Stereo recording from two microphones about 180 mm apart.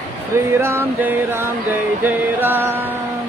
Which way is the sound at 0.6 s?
15° right (ahead or behind).